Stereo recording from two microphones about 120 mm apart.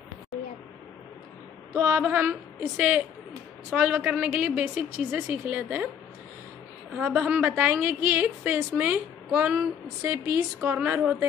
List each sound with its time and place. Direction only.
1.7 s a woman's voice: 20° right (ahead or behind)
7.0 s a woman's voice: 15° right (ahead or behind)